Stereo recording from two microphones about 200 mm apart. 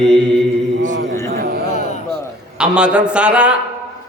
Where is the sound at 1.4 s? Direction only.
50° right (ahead or behind).